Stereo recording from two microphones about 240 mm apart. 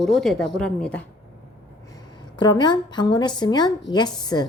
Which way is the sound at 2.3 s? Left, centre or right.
Centre.